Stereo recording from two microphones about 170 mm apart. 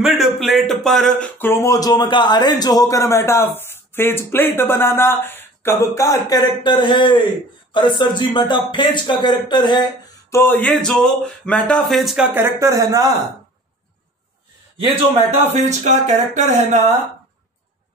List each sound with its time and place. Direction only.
0.0 s speech: centre (ahead or behind); by 9.8 s 25° left (ahead or behind)
10.3 s speech: 10° left (ahead or behind)
12.4 s speech: 15° right (ahead or behind)
14.8 s speech: 40° right (ahead or behind)